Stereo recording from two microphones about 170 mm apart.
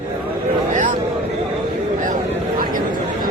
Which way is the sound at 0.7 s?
50° right (ahead or behind).